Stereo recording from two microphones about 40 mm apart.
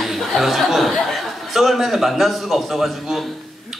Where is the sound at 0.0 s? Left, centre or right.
Centre.